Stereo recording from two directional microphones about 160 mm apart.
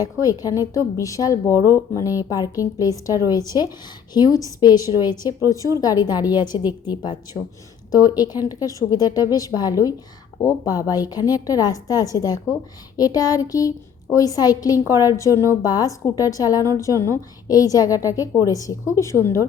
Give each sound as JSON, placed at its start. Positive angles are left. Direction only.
{"t": 0.0, "sound": "a woman's voice", "side_deg": 20}